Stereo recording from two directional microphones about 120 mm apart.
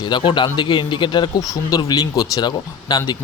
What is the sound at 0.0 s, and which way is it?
Speech, 40° left (ahead or behind).